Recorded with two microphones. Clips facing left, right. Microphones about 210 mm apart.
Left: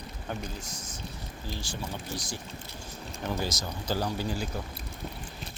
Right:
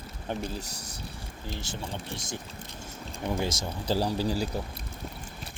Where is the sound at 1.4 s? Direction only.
20° right (ahead or behind).